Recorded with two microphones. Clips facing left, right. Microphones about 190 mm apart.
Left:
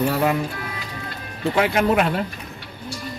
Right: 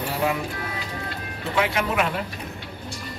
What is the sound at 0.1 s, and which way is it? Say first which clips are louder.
Music: left 4 dB; 55° left (ahead or behind).